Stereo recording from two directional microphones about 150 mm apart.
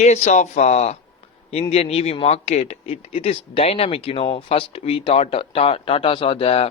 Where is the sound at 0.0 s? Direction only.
50° left (ahead or behind).